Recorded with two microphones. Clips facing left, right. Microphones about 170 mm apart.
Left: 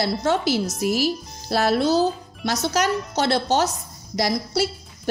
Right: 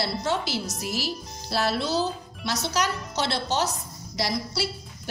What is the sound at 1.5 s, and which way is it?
A woman's voice, 50° left (ahead or behind).